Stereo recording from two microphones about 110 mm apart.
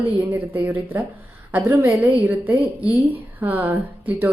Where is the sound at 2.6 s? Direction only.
60° right (ahead or behind).